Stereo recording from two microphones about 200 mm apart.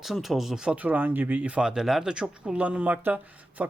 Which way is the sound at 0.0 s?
Centre (ahead or behind).